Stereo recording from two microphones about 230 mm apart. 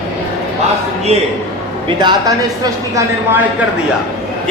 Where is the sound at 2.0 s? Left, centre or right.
Centre.